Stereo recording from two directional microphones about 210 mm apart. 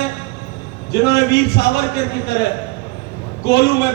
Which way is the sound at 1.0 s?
50° left (ahead or behind).